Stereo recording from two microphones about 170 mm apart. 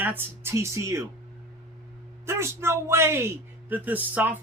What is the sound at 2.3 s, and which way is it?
Speech, 15° right (ahead or behind).